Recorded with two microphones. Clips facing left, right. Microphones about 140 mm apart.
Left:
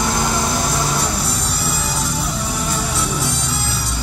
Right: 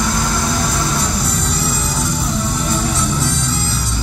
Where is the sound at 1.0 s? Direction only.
5° left (ahead or behind).